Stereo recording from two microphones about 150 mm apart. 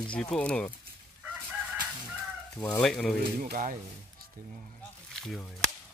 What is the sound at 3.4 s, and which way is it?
Speech, 60° right (ahead or behind).